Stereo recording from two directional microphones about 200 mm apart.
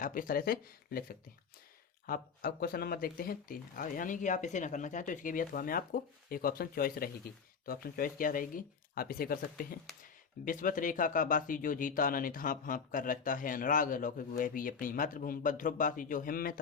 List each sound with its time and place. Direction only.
0.0 s speech: 45° left (ahead or behind)